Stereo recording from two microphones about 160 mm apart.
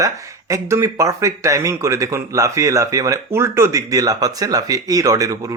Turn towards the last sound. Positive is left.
turn(degrees=-20)  # may be behind; listen again after turning